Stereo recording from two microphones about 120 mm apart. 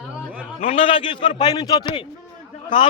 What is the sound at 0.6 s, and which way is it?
A man's voice, 50° left (ahead or behind).